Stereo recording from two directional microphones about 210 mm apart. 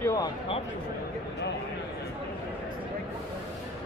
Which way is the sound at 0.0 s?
15° left (ahead or behind).